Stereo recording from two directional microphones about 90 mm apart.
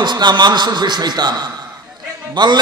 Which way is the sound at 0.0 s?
55° right (ahead or behind).